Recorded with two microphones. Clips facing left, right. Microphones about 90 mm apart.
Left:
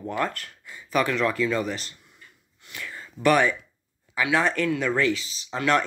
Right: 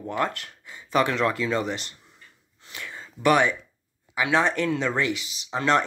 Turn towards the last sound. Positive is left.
turn(degrees=-20)  # may be behind; listen again after turning